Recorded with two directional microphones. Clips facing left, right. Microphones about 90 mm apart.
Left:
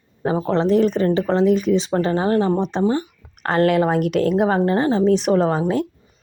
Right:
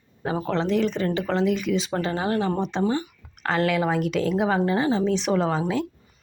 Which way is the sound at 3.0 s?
45° left (ahead or behind).